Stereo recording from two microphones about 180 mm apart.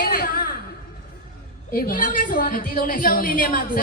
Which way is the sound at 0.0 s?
55° left (ahead or behind).